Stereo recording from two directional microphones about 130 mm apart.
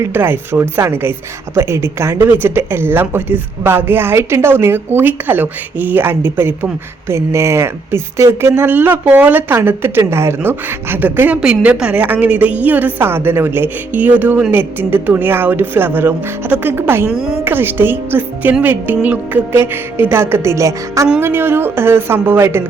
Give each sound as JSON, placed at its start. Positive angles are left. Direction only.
{"t": 0.0, "sound": "speech", "side_deg": -15}
{"t": 17.1, "sound": "a woman's voice", "side_deg": -5}
{"t": 17.4, "sound": "speech", "side_deg": -15}